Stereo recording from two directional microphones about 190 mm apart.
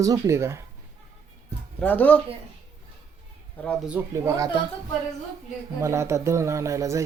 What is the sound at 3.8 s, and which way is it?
Speech, 10° right (ahead or behind).